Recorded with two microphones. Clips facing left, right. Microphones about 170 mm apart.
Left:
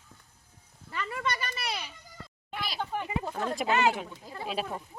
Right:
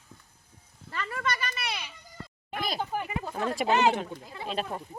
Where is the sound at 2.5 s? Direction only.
45° right (ahead or behind).